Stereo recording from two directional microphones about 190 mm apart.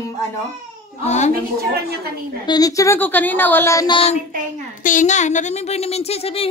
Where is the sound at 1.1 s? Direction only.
40° left (ahead or behind).